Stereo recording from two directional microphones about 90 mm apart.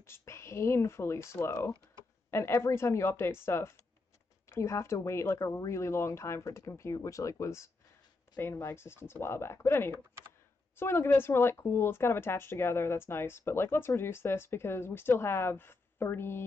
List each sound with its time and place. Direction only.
0.0 s speech: 30° left (ahead or behind)